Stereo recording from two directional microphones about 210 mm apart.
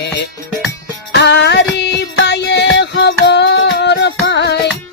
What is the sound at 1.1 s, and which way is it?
Music, 55° left (ahead or behind).